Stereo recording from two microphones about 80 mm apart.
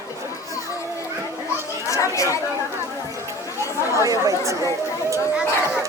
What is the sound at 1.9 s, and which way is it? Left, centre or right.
Speech, left.